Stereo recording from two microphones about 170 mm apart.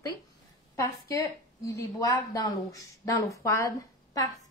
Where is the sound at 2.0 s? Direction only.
20° left (ahead or behind).